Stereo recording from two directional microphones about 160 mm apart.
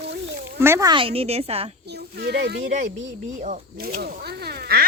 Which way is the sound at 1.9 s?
85° right.